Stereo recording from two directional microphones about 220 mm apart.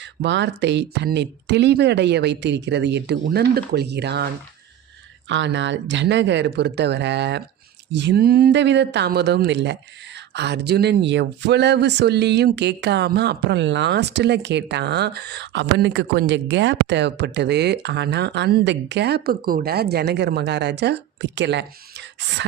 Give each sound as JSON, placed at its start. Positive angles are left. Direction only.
{"t": 0.0, "sound": "speech", "side_deg": -55}
{"t": 5.3, "sound": "speech", "side_deg": -55}